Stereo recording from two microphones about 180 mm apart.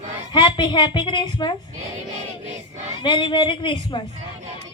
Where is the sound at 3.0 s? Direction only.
25° left (ahead or behind).